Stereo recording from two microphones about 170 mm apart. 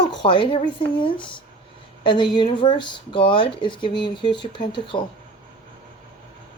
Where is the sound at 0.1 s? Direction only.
25° left (ahead or behind).